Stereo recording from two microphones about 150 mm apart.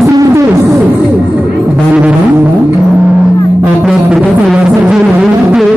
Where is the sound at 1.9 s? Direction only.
10° right (ahead or behind).